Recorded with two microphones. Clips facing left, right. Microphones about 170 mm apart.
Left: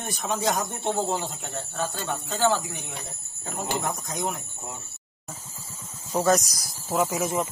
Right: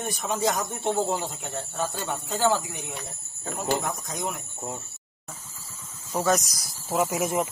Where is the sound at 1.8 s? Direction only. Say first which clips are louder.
Even; 5° right (ahead or behind).